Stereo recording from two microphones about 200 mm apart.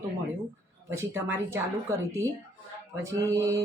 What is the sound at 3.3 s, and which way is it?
Speech, 15° right (ahead or behind).